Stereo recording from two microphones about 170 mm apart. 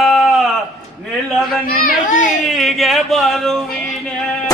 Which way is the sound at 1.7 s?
55° left (ahead or behind).